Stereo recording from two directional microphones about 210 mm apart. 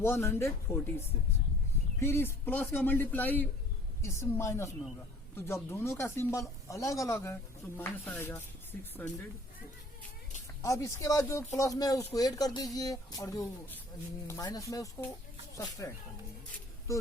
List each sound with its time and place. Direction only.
0.0 s speech: 10° left (ahead or behind)
10.6 s speech: 15° left (ahead or behind)